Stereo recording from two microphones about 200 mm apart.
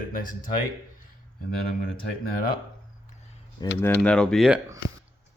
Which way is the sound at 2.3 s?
50° left (ahead or behind).